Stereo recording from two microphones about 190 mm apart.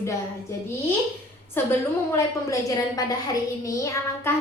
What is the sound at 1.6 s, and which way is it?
Speech, 10° left (ahead or behind).